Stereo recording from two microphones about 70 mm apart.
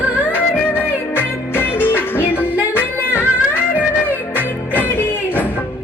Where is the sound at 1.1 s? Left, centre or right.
Left.